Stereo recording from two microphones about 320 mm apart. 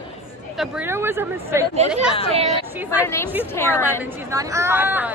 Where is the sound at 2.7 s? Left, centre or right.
Centre.